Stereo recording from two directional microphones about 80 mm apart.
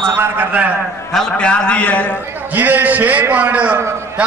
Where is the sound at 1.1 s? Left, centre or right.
Centre.